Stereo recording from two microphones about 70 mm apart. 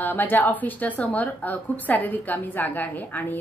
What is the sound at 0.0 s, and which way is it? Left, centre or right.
A woman's voice, left.